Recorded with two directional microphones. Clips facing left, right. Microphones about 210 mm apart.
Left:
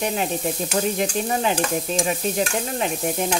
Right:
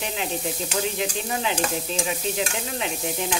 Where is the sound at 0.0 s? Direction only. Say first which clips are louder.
Left 5 dB; 45° left (ahead or behind).